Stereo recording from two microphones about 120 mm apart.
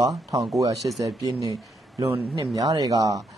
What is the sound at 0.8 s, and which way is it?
Speech, 30° right (ahead or behind).